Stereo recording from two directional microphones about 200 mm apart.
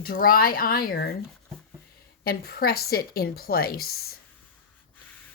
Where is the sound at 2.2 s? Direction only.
50° left (ahead or behind).